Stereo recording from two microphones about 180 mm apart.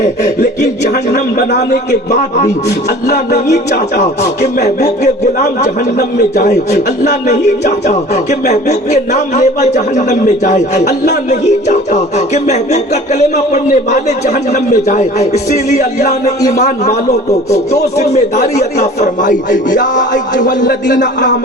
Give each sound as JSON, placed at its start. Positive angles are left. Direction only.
{"t": 1.1, "sound": "a man's voice", "side_deg": 55}
{"t": 2.0, "sound": "music", "side_deg": 40}
{"t": 18.1, "sound": "speech", "side_deg": 40}